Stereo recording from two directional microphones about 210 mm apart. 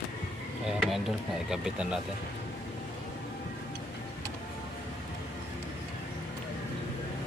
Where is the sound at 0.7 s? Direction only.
Centre (ahead or behind).